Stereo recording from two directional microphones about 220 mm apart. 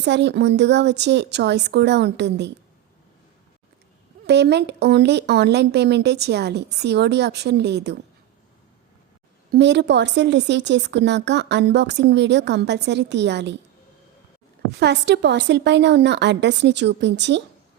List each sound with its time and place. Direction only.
0.0 s a woman's voice: 50° right (ahead or behind)
4.3 s a woman's voice: 50° right (ahead or behind)
9.5 s a woman's voice: 50° right (ahead or behind)
14.7 s a woman's voice: 50° right (ahead or behind)